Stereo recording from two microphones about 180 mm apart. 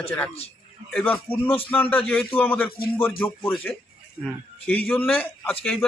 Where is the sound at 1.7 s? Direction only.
10° left (ahead or behind).